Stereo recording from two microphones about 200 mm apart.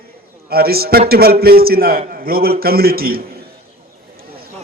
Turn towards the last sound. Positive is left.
turn(degrees=-50)  # may be behind; listen again after turning